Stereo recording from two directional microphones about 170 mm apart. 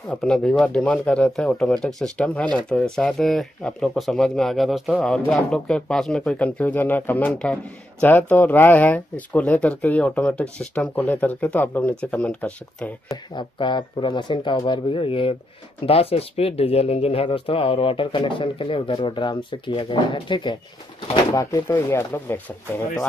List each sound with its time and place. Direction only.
0.1 s speech: 5° left (ahead or behind)
13.1 s speech: 25° left (ahead or behind)